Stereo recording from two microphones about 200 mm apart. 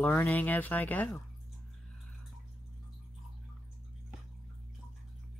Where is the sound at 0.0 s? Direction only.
10° left (ahead or behind).